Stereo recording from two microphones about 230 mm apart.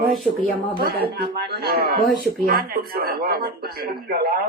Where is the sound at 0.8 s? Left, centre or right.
Right.